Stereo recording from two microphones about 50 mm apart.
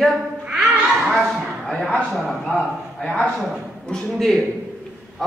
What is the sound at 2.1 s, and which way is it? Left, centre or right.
Speech, centre.